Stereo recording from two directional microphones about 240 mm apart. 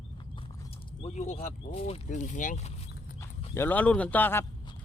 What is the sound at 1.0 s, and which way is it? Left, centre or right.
Speech, left.